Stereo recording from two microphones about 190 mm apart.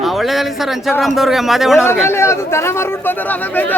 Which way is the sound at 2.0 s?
15° left (ahead or behind).